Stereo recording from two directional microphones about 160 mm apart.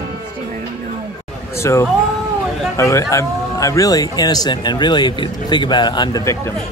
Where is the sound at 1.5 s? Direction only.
15° left (ahead or behind).